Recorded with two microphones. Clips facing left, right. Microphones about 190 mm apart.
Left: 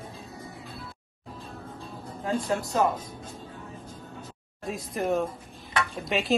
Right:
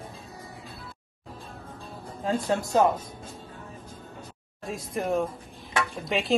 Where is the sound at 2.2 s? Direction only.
20° right (ahead or behind).